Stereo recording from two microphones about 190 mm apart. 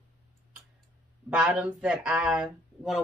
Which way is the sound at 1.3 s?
5° right (ahead or behind).